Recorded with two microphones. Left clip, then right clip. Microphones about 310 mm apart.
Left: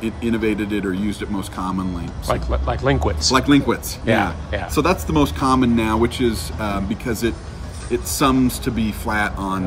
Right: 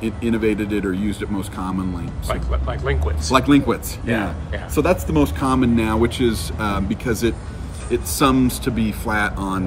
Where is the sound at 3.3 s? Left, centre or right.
Centre.